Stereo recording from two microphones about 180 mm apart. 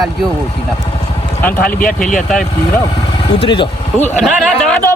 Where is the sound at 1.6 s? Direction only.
50° left (ahead or behind).